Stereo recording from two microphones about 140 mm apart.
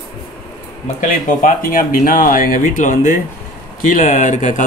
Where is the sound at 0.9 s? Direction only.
75° left (ahead or behind).